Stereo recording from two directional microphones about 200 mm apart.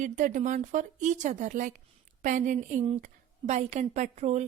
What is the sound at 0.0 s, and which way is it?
A woman's voice, 40° right (ahead or behind).